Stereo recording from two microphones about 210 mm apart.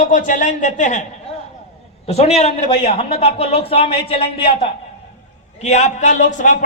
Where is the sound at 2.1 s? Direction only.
30° left (ahead or behind).